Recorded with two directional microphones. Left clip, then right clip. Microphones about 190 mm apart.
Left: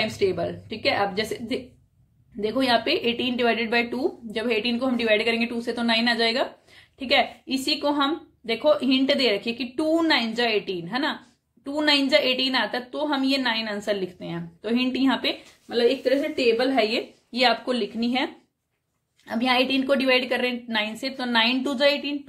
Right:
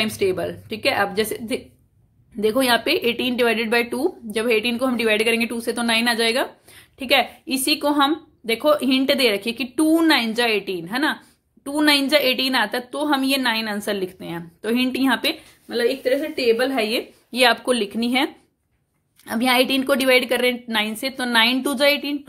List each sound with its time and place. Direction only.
0.0 s a woman's voice: 35° right (ahead or behind)